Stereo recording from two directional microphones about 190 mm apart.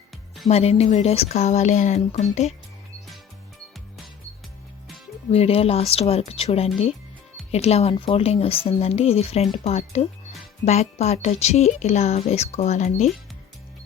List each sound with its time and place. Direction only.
0.4 s speech: 35° left (ahead or behind)
5.3 s speech: 30° left (ahead or behind)